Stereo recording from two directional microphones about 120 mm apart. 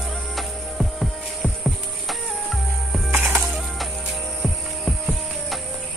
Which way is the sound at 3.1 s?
15° right (ahead or behind).